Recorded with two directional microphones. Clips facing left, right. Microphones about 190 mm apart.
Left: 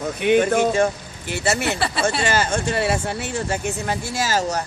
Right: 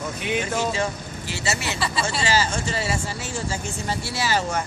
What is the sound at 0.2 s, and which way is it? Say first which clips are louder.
Speech: left 9 dB; 60° left (ahead or behind).